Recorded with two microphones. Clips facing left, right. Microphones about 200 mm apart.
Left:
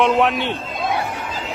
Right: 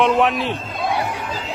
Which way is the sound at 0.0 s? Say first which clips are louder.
Even; centre (ahead or behind).